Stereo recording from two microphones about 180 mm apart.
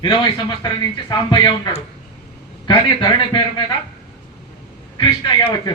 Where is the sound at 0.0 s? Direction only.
25° left (ahead or behind).